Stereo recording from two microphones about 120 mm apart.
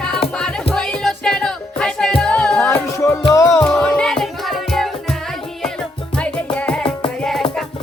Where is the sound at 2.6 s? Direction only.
20° left (ahead or behind).